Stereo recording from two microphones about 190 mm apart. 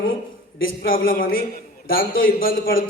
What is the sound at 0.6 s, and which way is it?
A man's voice, 50° left (ahead or behind).